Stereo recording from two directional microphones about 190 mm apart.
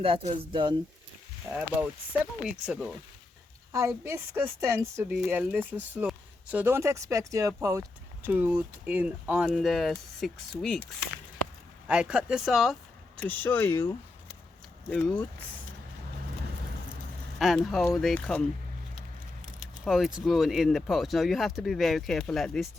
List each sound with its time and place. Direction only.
0.0 s speech: 30° right (ahead or behind)
1.5 s speech: 10° right (ahead or behind)
3.7 s speech: 15° right (ahead or behind)
13.1 s speech: 10° left (ahead or behind)
17.3 s speech: centre (ahead or behind)
19.8 s speech: centre (ahead or behind)